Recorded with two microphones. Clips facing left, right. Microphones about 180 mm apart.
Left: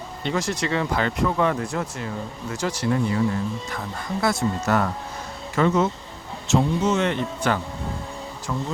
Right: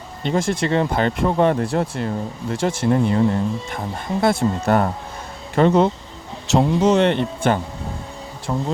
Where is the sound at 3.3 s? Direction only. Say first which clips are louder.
Right 5 dB; 30° right (ahead or behind).